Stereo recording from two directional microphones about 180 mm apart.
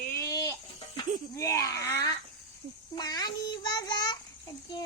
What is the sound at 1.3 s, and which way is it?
A child's voice, 15° left (ahead or behind).